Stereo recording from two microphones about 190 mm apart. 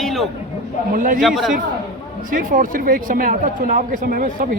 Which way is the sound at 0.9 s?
45° right (ahead or behind).